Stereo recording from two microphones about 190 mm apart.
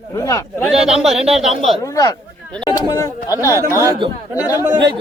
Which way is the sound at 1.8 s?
15° left (ahead or behind).